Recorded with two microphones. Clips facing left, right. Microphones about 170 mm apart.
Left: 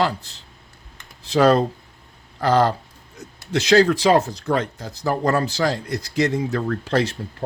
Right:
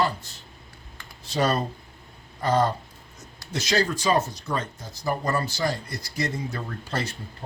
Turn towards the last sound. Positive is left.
turn(degrees=70)  # may be behind; listen again after turning